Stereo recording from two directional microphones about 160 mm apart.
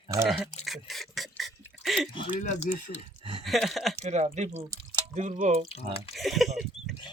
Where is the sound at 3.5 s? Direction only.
Centre (ahead or behind).